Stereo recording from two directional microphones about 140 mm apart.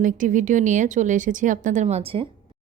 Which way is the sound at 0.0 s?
70° right (ahead or behind).